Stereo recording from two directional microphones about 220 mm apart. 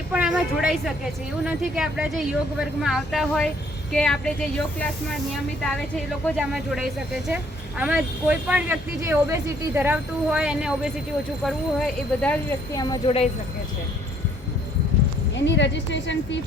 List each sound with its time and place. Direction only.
0.1 s a woman's voice: 5° right (ahead or behind)
6.2 s a woman's voice: centre (ahead or behind)
12.8 s speech: 20° left (ahead or behind)
15.4 s speech: 55° left (ahead or behind)